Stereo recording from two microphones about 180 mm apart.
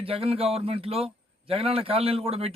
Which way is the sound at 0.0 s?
30° right (ahead or behind).